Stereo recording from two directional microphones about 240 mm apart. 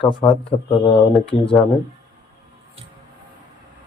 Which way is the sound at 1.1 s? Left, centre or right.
Centre.